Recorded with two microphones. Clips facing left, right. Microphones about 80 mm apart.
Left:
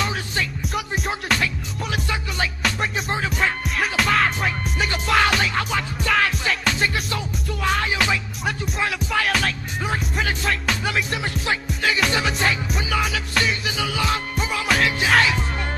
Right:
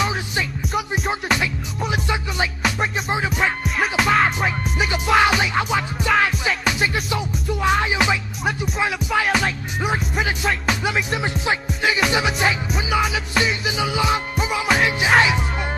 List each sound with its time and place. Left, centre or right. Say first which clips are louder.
0.7 s music: right 3 dB; centre
2.0 s music: right 2 dB; centre
8.5 s music: right 3 dB; centre
9.1 s music: right 2 dB; centre
11.4 s music: right 1 dB; centre